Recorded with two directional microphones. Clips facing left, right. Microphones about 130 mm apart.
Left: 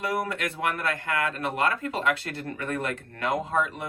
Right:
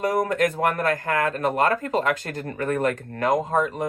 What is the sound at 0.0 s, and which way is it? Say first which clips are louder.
Speech: right 7 dB; 40° right (ahead or behind).